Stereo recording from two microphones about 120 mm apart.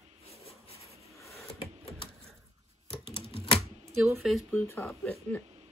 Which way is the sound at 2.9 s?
45° left (ahead or behind).